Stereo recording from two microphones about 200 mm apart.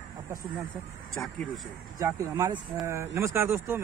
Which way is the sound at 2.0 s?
15° right (ahead or behind).